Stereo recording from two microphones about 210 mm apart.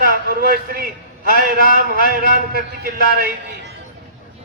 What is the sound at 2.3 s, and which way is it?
Speech, 45° right (ahead or behind).